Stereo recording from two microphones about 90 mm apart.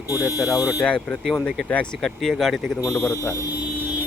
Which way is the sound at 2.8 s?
40° left (ahead or behind).